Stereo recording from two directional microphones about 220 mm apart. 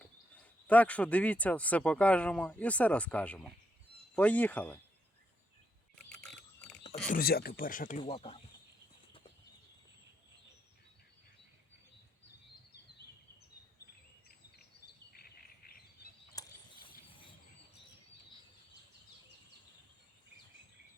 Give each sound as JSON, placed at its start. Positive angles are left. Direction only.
{"t": 0.7, "sound": "speech", "side_deg": 5}
{"t": 6.1, "sound": "a sound", "side_deg": 0}
{"t": 7.1, "sound": "speech", "side_deg": 45}
{"t": 8.1, "sound": "speech", "side_deg": 25}
{"t": 15.1, "sound": "bird vocalization", "side_deg": 45}
{"t": 16.4, "sound": "a sound", "side_deg": 15}